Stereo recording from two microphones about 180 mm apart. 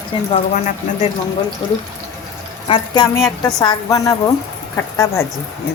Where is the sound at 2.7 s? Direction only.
25° left (ahead or behind).